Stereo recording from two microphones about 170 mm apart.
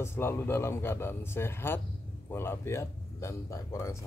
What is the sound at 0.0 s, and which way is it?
Speech, 15° left (ahead or behind).